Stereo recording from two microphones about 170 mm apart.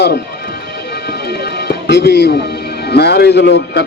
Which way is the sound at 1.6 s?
75° left (ahead or behind).